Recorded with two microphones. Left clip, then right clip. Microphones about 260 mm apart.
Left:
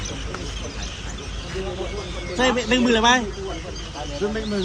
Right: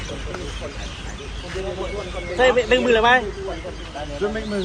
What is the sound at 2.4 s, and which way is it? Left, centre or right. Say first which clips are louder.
Speech: right 4 dB; left.